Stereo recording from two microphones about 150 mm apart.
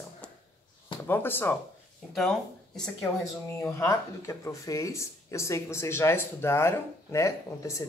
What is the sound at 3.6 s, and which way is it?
Speech, 20° left (ahead or behind).